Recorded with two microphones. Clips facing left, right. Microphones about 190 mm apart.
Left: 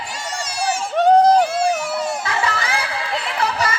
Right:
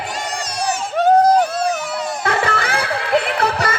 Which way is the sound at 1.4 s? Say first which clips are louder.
Left 1 dB; 10° left (ahead or behind).